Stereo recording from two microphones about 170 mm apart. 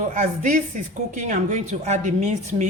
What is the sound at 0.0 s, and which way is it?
A woman's voice, 50° right (ahead or behind).